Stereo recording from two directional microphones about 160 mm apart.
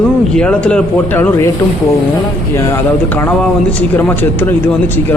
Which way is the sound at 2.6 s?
15° left (ahead or behind).